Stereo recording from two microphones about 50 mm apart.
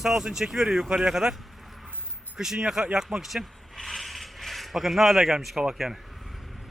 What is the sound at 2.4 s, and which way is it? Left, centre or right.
Speech, centre.